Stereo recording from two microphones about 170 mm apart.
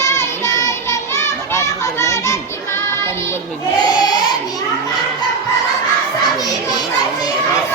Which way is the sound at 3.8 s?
25° left (ahead or behind).